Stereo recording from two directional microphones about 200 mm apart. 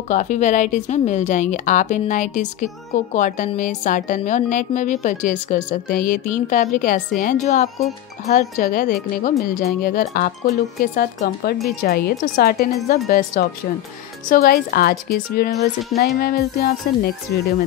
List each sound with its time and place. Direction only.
0.1 s speech: 40° left (ahead or behind)